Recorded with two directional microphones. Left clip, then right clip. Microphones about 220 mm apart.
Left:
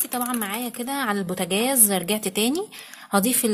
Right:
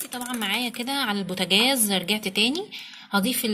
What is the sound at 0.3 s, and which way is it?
A woman's voice, 5° left (ahead or behind).